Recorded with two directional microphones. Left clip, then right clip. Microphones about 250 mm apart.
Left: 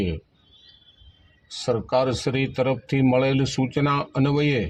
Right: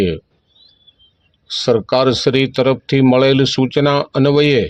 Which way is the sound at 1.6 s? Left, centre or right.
Right.